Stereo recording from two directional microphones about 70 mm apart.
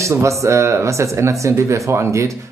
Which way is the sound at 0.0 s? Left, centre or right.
Right.